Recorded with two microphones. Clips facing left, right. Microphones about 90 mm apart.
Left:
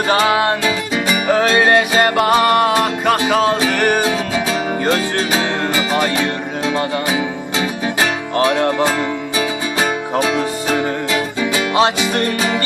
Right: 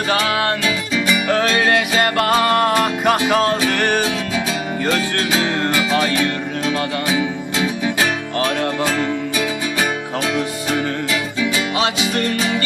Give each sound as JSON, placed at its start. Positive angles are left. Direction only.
{"t": 0.1, "sound": "music", "side_deg": 25}
{"t": 0.9, "sound": "music", "side_deg": 45}
{"t": 1.3, "sound": "music", "side_deg": 25}
{"t": 2.1, "sound": "music", "side_deg": 10}
{"t": 5.3, "sound": "music", "side_deg": 15}
{"t": 6.7, "sound": "music", "side_deg": 30}
{"t": 8.4, "sound": "music", "side_deg": 30}
{"t": 10.2, "sound": "music", "side_deg": 35}